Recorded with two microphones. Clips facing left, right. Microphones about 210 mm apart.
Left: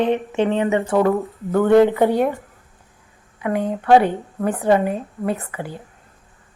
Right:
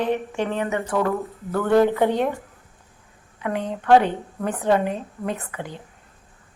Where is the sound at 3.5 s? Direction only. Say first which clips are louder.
Left 5 dB; 45° left (ahead or behind).